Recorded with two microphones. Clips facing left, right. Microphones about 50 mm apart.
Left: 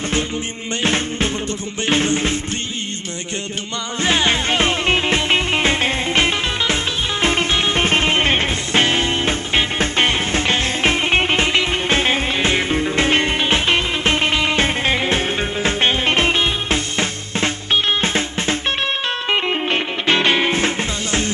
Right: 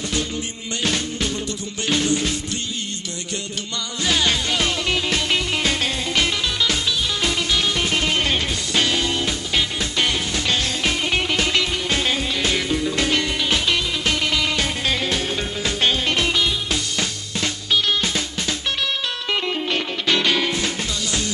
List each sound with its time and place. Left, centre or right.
0.8 s music: left
4.0 s music: left